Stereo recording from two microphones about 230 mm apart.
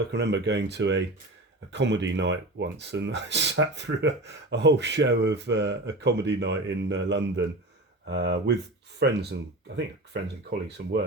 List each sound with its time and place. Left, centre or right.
0.1 s speech: right